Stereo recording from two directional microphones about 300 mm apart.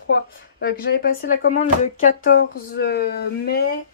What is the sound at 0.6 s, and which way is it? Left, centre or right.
Speech, left.